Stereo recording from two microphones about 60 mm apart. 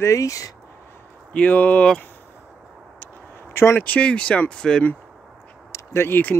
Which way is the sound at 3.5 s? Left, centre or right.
Left.